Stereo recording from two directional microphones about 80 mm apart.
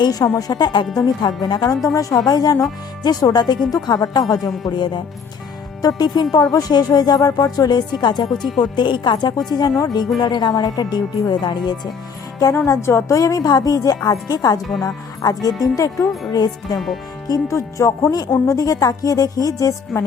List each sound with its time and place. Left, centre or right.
0.0 s speech: left
0.9 s speech: left
5.8 s speech: left
8.3 s speech: centre
8.5 s speech: left
9.5 s speech: left
12.5 s speech: left
14.7 s speech: centre
15.2 s speech: left
16.7 s speech: centre
17.2 s speech: left